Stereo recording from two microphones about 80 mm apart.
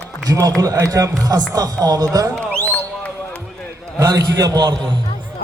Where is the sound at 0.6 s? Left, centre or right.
Right.